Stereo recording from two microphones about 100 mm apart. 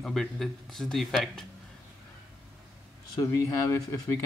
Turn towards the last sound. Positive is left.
turn(degrees=35)  # may be behind; listen again after turning